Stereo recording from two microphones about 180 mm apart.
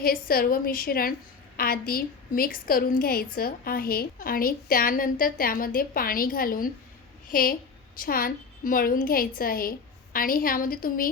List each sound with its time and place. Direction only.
0.0 s a woman's voice: 55° left (ahead or behind)